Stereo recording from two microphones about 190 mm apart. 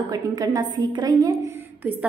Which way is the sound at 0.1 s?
20° right (ahead or behind).